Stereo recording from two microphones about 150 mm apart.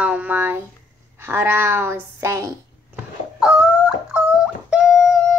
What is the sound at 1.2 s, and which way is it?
A woman's voice, 15° right (ahead or behind).